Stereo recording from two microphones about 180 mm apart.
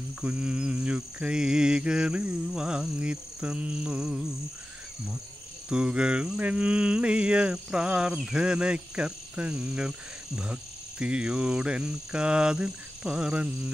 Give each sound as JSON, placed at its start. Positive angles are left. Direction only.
{"t": 0.2, "sound": "mantra", "side_deg": -5}
{"t": 5.7, "sound": "mantra", "side_deg": -5}